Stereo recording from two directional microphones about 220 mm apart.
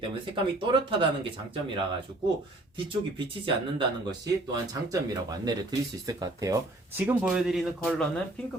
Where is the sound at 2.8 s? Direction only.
20° right (ahead or behind).